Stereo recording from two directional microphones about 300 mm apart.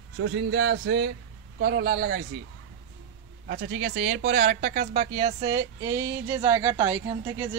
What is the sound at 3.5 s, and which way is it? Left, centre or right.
Speech, right.